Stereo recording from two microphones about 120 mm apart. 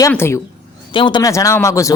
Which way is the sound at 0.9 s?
40° left (ahead or behind).